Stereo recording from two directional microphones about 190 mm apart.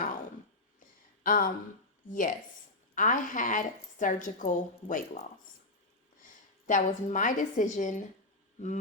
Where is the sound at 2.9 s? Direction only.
45° left (ahead or behind).